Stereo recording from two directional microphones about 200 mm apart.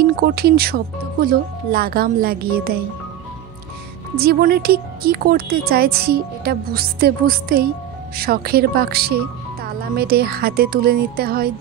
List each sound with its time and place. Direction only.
0.0 s speech: 50° right (ahead or behind)
4.2 s speech: 50° right (ahead or behind)